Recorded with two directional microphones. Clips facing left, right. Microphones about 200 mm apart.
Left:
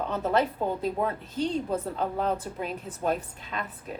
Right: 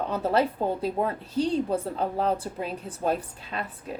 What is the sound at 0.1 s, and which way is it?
A woman's voice, 35° right (ahead or behind).